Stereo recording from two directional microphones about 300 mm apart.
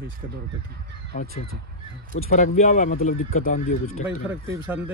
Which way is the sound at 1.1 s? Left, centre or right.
Left.